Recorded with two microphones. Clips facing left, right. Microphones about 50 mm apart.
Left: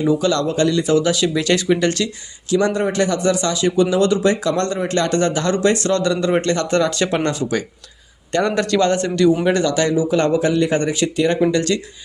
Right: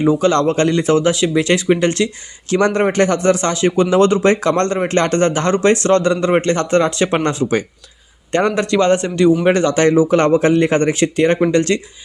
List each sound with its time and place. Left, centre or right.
0.0 s a man's voice: right
2.5 s a man's voice: right